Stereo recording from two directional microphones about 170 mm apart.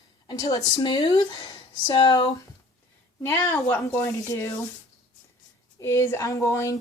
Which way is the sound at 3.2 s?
10° left (ahead or behind).